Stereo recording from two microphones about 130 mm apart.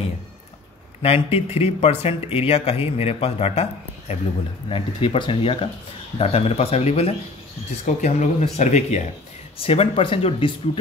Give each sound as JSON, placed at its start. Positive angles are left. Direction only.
{"t": 1.0, "sound": "speech", "side_deg": 50}
{"t": 4.6, "sound": "speech", "side_deg": 45}
{"t": 9.6, "sound": "speech", "side_deg": 45}